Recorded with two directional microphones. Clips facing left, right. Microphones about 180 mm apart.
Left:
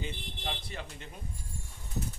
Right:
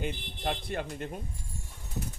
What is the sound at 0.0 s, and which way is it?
Speech, 55° right (ahead or behind).